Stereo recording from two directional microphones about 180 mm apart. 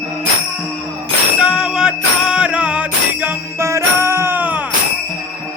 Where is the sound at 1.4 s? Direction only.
5° right (ahead or behind).